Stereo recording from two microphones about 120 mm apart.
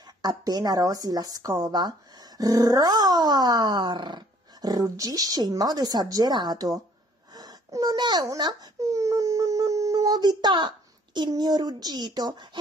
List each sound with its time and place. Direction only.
0.2 s speech: 35° right (ahead or behind)
7.3 s wail: 30° right (ahead or behind)
11.1 s speech: 35° right (ahead or behind)